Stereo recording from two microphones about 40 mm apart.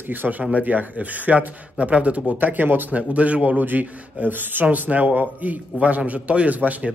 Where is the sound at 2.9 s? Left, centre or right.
Right.